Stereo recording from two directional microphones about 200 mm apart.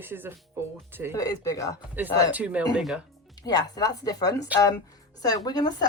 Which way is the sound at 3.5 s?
20° left (ahead or behind).